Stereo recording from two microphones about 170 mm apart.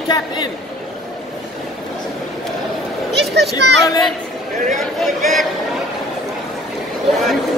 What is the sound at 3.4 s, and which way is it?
Speech, 80° right.